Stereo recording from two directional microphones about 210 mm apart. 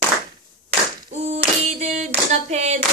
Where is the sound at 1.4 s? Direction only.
35° right (ahead or behind).